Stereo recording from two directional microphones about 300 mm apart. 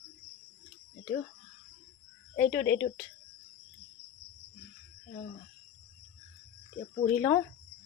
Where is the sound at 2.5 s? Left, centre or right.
Left.